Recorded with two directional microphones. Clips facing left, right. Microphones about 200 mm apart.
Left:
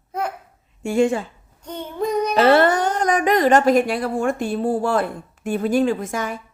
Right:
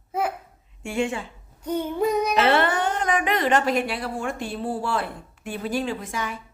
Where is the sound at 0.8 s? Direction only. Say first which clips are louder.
Left 8 dB; 40° left (ahead or behind).